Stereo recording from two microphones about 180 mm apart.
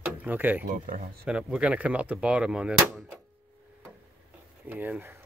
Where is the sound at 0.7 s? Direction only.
50° right (ahead or behind).